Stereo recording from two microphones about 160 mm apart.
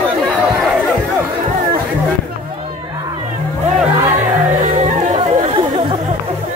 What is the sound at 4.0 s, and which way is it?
Music, 15° right (ahead or behind).